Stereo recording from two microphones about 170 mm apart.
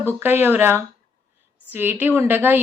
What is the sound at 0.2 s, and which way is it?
A woman's voice, 10° right (ahead or behind).